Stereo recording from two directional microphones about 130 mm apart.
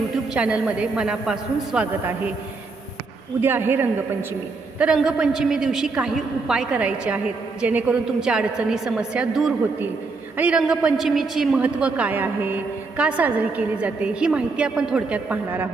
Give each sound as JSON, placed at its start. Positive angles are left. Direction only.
{"t": 0.3, "sound": "a woman's voice", "side_deg": -10}
{"t": 3.4, "sound": "a woman's voice", "side_deg": -15}
{"t": 4.8, "sound": "a woman's voice", "side_deg": -5}